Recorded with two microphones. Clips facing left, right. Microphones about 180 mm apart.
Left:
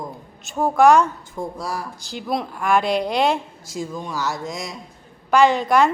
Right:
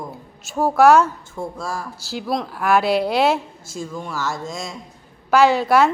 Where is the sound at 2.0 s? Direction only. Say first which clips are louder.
Right 2 dB; 5° right (ahead or behind).